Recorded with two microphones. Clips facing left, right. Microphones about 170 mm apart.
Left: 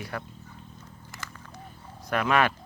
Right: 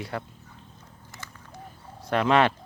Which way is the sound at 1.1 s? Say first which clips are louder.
Left 2 dB; 90° left.